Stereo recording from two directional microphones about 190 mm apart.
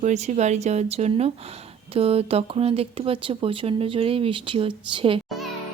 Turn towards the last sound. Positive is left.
turn(degrees=-30)  # may be behind; listen again after turning